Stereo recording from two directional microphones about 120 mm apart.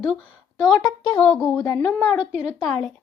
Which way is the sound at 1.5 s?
35° left (ahead or behind).